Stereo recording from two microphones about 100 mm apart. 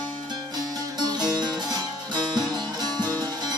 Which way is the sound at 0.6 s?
40° right (ahead or behind).